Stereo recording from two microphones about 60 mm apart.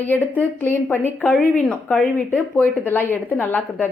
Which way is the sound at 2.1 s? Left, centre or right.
Left.